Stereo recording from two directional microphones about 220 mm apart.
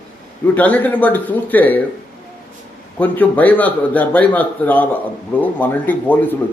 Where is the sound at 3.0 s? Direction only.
5° left (ahead or behind).